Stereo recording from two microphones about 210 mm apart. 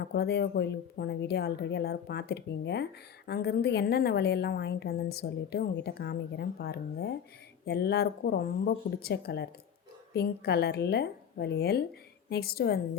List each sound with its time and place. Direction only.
0.0 s a woman's voice: 50° left (ahead or behind)